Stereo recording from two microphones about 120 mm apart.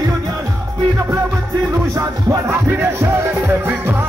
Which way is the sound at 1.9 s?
20° right (ahead or behind).